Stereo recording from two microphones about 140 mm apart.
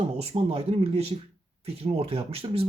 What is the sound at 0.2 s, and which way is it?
Speech, 45° right (ahead or behind).